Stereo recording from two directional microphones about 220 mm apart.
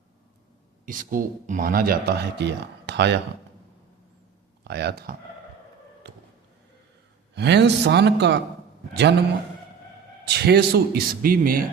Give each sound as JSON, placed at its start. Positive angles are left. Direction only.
{"t": 0.9, "sound": "a man's voice", "side_deg": -35}
{"t": 4.6, "sound": "a man's voice", "side_deg": -50}
{"t": 7.3, "sound": "a man's voice", "side_deg": -50}
{"t": 10.2, "sound": "a man's voice", "side_deg": -50}